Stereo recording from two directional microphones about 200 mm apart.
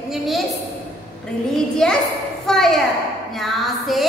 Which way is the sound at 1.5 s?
5° left (ahead or behind).